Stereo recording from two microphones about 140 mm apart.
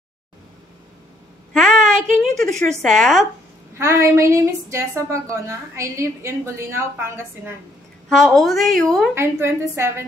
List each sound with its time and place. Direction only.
1.5 s a sound: 5° left (ahead or behind)
2.8 s a woman's voice: 5° left (ahead or behind)
3.7 s a woman's voice: 20° right (ahead or behind)
8.1 s a woman's voice: 5° left (ahead or behind)
9.1 s a woman's voice: 20° right (ahead or behind)